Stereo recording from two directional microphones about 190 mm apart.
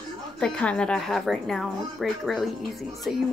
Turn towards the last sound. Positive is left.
turn(degrees=0)  # may be behind; listen again after turning